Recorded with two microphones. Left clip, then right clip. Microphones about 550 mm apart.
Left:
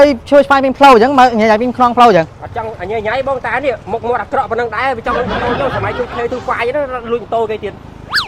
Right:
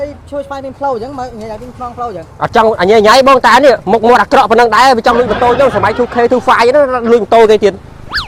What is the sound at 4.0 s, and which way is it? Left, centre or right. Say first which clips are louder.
Speech: right 9 dB; right.